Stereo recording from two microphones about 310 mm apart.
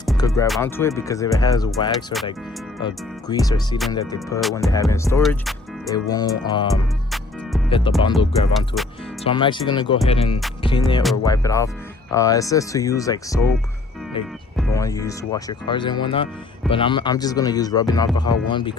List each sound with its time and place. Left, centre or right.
0.2 s music: centre
0.4 s speech: centre
4.4 s music: centre
4.7 s speech: centre
7.7 s speech: centre
8.5 s music: centre
9.2 s speech: centre
10.1 s music: centre
11.3 s speech: centre
14.5 s speech: centre